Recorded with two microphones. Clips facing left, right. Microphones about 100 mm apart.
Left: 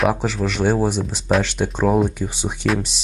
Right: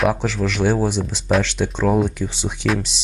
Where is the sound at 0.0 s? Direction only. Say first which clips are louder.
Even; centre (ahead or behind).